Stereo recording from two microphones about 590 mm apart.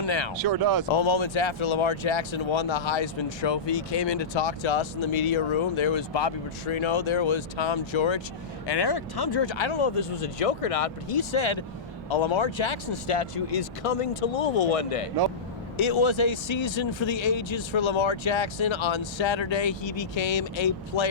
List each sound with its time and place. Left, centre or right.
0.0 s speech: left
0.3 s speech: right
0.9 s speech: left
15.8 s speech: left